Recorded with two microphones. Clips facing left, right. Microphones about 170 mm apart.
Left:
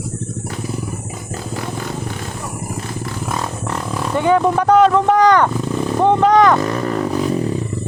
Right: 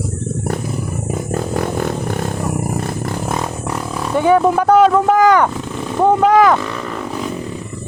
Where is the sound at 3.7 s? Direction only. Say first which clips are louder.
Right 1 dB; 5° right (ahead or behind).